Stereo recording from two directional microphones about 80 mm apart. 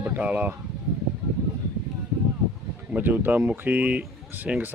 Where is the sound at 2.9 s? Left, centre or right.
Right.